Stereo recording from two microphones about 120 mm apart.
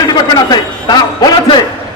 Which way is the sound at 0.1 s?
35° left (ahead or behind).